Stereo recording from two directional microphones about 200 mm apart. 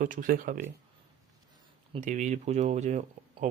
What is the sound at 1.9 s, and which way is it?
Speech, 40° right (ahead or behind).